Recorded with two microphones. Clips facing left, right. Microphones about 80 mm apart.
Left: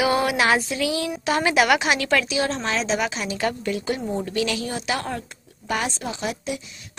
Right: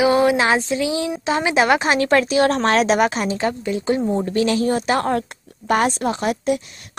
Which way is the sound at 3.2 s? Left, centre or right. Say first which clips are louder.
Right 3 dB; right.